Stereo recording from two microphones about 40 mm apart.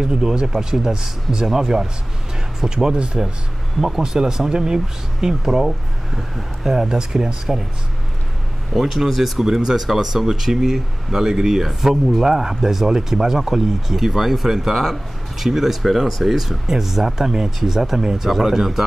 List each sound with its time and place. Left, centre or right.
0.0 s speech: centre
8.7 s speech: centre